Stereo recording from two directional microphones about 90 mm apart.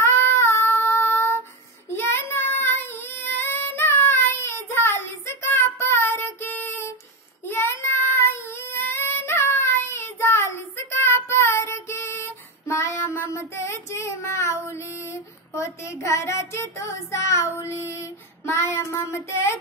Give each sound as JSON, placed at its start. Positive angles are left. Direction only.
{"t": 0.0, "sound": "child singing", "side_deg": 25}
{"t": 14.7, "sound": "female singing", "side_deg": 30}